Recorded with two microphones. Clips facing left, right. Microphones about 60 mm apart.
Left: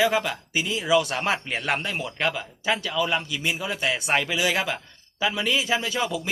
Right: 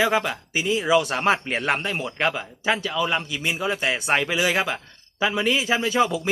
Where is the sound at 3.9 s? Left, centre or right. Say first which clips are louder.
Even; centre.